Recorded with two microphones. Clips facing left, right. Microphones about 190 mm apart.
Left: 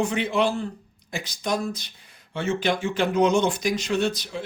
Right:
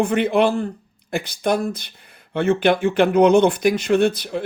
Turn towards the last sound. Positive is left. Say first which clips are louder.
# right 7 dB
turn(degrees=-55)  # may be behind; listen again after turning